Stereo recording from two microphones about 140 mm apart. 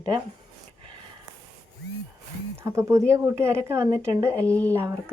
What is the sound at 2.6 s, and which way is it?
A woman's voice, 20° right (ahead or behind).